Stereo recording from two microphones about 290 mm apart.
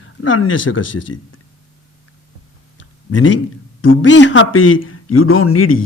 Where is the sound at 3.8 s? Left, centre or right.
Left.